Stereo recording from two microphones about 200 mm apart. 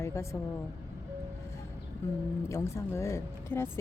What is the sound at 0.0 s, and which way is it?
Speech, 15° left (ahead or behind).